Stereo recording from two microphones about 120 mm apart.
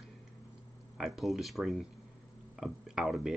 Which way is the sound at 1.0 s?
Centre (ahead or behind).